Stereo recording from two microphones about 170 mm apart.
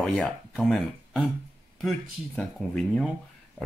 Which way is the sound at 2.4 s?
5° left (ahead or behind).